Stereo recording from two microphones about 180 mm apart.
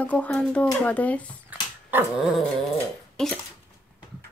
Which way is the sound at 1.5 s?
10° right (ahead or behind).